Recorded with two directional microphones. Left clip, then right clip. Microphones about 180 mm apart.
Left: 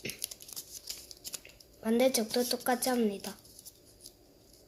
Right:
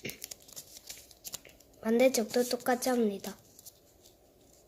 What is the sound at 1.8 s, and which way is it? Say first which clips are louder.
Speech: right 2 dB; 25° right (ahead or behind).